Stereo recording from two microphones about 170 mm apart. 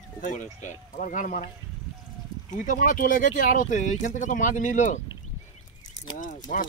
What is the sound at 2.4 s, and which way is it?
Speech, 50° left (ahead or behind).